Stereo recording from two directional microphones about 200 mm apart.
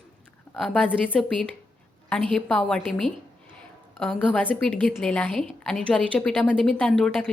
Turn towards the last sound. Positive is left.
turn(degrees=5)  # may be behind; listen again after turning